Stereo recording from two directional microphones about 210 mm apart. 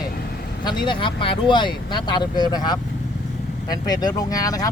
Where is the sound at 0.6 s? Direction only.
20° left (ahead or behind).